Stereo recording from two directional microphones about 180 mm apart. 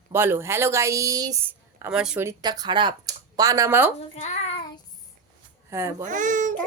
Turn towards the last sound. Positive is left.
turn(degrees=-45)  # may be behind; listen again after turning